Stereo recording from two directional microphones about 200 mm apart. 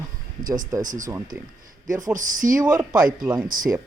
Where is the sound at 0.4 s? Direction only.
40° right (ahead or behind).